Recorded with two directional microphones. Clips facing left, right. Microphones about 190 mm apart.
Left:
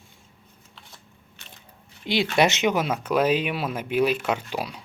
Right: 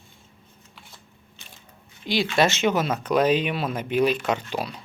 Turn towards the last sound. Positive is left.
turn(degrees=10)  # may be behind; listen again after turning